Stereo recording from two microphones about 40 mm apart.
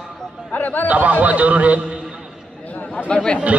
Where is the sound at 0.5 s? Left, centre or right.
Left.